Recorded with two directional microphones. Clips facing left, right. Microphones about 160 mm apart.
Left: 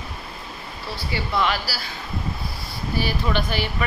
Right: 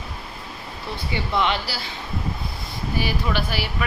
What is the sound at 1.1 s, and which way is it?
Speech, 20° right (ahead or behind).